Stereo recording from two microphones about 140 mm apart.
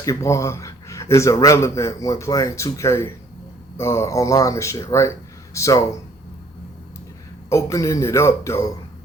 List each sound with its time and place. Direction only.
0.0 s speech: 20° left (ahead or behind)
7.5 s speech: 20° left (ahead or behind)